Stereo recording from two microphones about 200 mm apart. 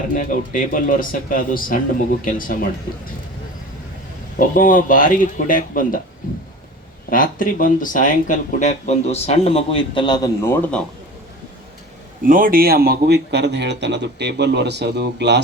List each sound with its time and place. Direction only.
0.1 s speech: 45° left (ahead or behind)
4.4 s speech: 45° left (ahead or behind)
7.1 s speech: 45° left (ahead or behind); by 10.5 s 20° left (ahead or behind)
12.2 s speech: 45° right (ahead or behind)